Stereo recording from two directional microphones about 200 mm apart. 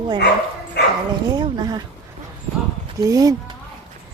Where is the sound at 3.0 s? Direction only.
15° right (ahead or behind).